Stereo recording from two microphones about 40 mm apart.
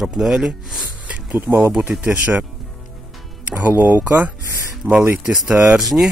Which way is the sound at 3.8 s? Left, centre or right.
Right.